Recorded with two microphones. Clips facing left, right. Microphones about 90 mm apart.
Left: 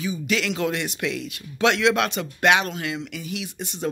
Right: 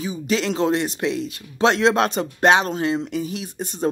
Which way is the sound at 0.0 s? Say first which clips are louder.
Right 2 dB; 35° right (ahead or behind).